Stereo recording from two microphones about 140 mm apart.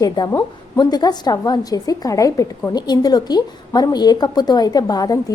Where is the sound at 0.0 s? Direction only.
25° left (ahead or behind).